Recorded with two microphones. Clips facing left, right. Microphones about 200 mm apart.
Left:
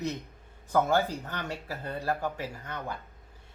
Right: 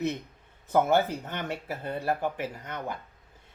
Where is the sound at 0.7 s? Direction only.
20° right (ahead or behind).